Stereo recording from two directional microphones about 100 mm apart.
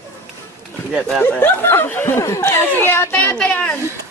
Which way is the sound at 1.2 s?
15° left (ahead or behind).